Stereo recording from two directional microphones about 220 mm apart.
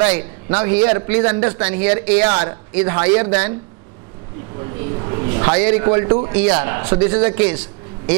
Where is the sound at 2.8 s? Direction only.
15° right (ahead or behind).